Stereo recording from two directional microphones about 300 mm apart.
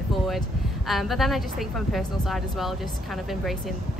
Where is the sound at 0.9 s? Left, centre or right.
Centre.